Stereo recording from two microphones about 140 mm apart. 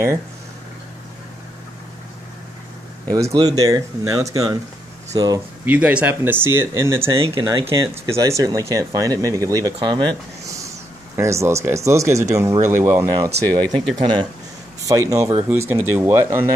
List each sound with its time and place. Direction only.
3.1 s speech: 25° right (ahead or behind)
5.7 s speech: 10° right (ahead or behind)
7.2 s speech: 30° right (ahead or behind)
7.6 s speech: 20° right (ahead or behind)
11.1 s speech: 20° right (ahead or behind)
13.9 s speech: 35° right (ahead or behind)